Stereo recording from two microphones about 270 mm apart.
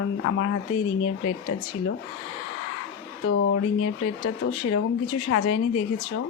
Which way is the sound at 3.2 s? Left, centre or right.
Left.